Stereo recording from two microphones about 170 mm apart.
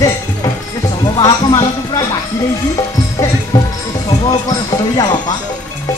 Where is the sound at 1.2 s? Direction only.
20° left (ahead or behind).